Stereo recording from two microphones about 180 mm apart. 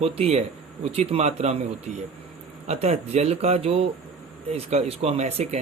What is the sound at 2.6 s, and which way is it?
Speech, 35° right (ahead or behind).